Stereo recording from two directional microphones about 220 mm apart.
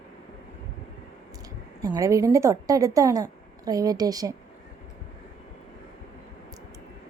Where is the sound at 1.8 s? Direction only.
15° right (ahead or behind).